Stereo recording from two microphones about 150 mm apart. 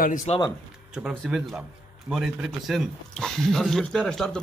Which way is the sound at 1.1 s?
Centre (ahead or behind).